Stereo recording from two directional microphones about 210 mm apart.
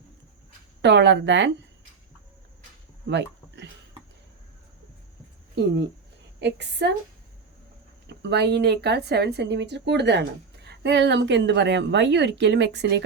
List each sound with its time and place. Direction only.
0.8 s speech: 55° right (ahead or behind)
3.1 s a sound: 55° right (ahead or behind)
6.4 s speech: 55° right (ahead or behind)
8.1 s speech: 55° right (ahead or behind)